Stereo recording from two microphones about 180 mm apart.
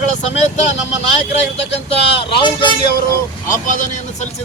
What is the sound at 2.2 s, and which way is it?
Speech, 25° left (ahead or behind).